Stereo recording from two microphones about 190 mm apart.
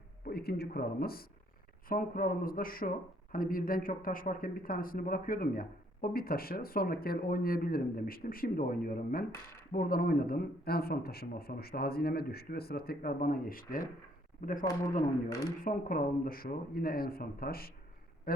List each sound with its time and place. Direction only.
0.3 s speech: 55° left (ahead or behind)
14.6 s a man's voice: 20° left (ahead or behind)
15.6 s speech: 50° left (ahead or behind)
18.3 s a sound: 50° left (ahead or behind)